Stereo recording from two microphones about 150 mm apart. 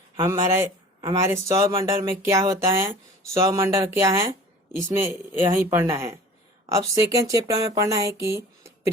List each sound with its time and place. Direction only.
0.2 s speech: 20° right (ahead or behind)